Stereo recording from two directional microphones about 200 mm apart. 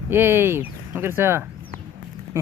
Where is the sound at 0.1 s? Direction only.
10° right (ahead or behind).